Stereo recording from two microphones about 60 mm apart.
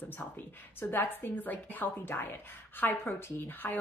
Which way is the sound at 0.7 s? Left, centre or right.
Left.